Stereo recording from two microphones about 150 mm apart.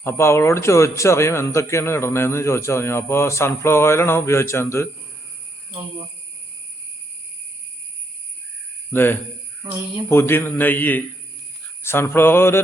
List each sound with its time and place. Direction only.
0.0 s a man's voice: 15° left (ahead or behind)
8.9 s a man's voice: 15° left (ahead or behind)